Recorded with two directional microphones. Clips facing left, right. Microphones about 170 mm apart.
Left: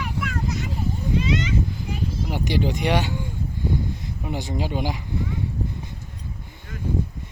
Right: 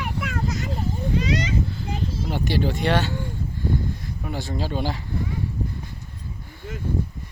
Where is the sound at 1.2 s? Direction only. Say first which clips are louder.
Left 1 dB; 40° right (ahead or behind).